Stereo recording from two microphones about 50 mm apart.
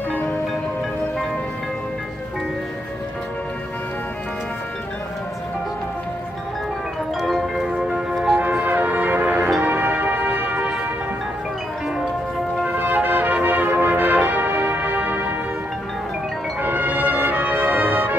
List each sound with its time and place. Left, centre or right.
7.2 s marimba: centre
7.7 s music: right
8.1 s music: centre
8.4 s music: right
12.6 s music: right
16.6 s music: right